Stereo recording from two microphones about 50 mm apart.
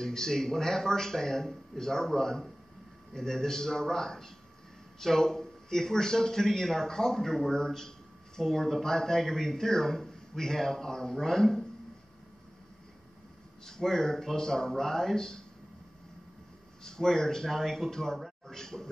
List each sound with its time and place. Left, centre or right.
0.0 s speech: centre
13.7 s speech: centre
16.8 s speech: centre